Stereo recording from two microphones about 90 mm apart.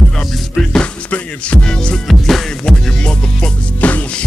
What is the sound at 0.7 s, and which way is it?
Music, 10° left (ahead or behind).